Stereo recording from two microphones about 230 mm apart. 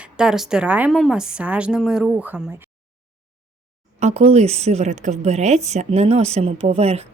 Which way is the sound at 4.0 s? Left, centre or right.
Right.